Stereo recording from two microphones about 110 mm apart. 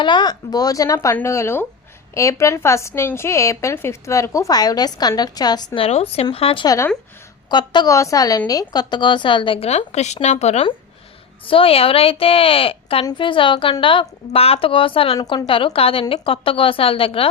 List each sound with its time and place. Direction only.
0.0 s a woman's voice: 45° left (ahead or behind)
5.7 s a woman's voice: 60° left (ahead or behind)
6.3 s a woman's voice: 55° left (ahead or behind)
7.5 s a woman's voice: 45° left (ahead or behind)
7.9 s a woman's voice: 30° left (ahead or behind); by 9.6 s 50° left (ahead or behind)
9.6 s speech: 85° left
11.4 s a woman's voice: 55° left (ahead or behind)
13.1 s a woman's voice: 50° left (ahead or behind)